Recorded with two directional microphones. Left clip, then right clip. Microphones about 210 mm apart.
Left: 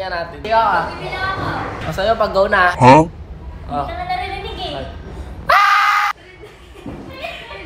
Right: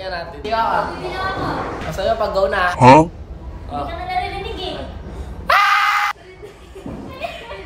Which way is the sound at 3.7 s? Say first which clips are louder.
Left 4 dB; 30° left (ahead or behind).